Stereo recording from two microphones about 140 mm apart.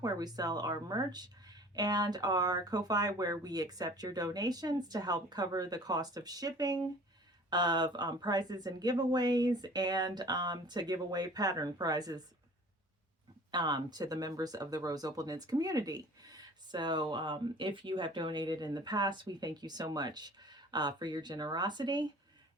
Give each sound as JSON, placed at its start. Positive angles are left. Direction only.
{"t": 0.0, "sound": "speech", "side_deg": -25}
{"t": 13.5, "sound": "speech", "side_deg": -30}